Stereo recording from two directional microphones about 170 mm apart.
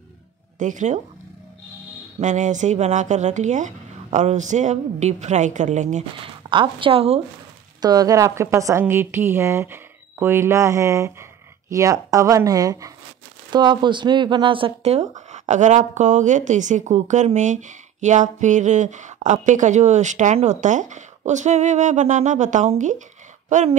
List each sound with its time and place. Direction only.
0.6 s speech: 50° right (ahead or behind)
2.1 s speech: 45° right (ahead or behind)
6.5 s a woman's voice: 30° right (ahead or behind)
7.8 s a woman's voice: 20° right (ahead or behind); by 23.8 s 45° right (ahead or behind)